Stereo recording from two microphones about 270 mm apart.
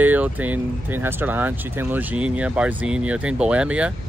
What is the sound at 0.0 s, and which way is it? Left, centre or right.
Speech, centre.